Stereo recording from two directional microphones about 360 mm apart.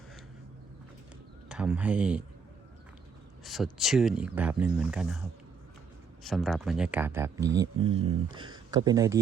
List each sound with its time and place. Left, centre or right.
1.5 s speech: centre
3.4 s speech: centre
6.2 s speech: centre